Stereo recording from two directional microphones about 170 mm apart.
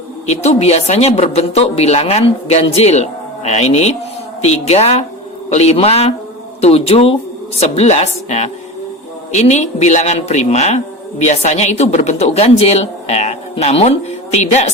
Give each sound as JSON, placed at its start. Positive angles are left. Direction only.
{"t": 0.3, "sound": "a woman's voice", "side_deg": 40}